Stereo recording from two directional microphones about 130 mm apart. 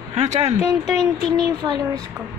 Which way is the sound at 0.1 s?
55° right (ahead or behind).